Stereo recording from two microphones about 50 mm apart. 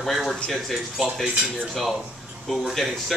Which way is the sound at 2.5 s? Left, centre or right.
Centre.